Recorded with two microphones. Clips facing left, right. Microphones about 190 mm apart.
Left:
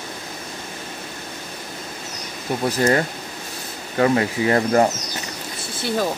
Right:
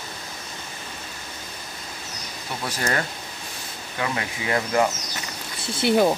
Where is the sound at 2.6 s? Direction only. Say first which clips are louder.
Left 8 dB; 35° left (ahead or behind).